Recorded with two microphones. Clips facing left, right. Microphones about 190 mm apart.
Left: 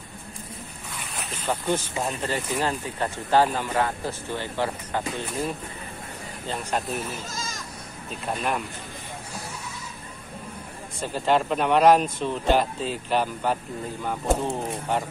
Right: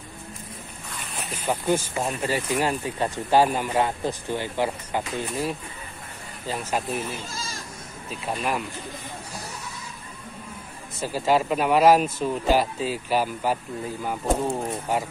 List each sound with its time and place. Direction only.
1.1 s boat: 10° right (ahead or behind)
2.0 s speech: 10° right (ahead or behind)
7.3 s bleat: 30° right (ahead or behind)
8.1 s speech: centre (ahead or behind)
11.0 s speech: 5° right (ahead or behind)